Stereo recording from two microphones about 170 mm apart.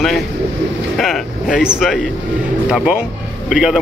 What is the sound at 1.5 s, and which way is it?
A man's voice, 5° right (ahead or behind).